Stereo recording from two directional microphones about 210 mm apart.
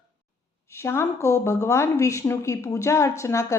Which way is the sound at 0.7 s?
10° left (ahead or behind).